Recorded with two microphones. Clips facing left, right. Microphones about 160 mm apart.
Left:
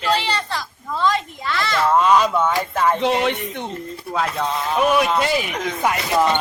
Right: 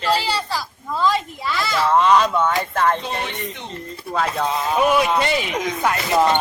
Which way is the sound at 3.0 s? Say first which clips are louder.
Left 9 dB; 90° left.